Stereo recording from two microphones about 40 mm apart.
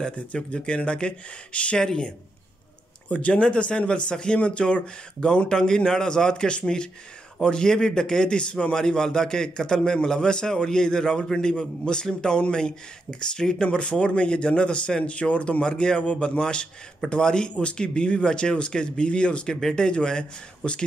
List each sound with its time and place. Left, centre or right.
0.1 s speech: left
1.8 s a man's voice: centre
3.1 s a man's voice: left
13.7 s speech: left